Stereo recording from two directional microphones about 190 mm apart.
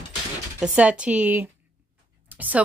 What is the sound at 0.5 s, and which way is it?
A woman's voice, 5° right (ahead or behind).